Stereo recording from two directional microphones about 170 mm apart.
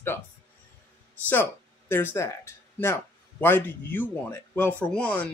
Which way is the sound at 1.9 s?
15° left (ahead or behind).